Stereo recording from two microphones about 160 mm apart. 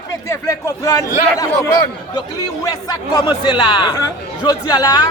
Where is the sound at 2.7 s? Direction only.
25° left (ahead or behind).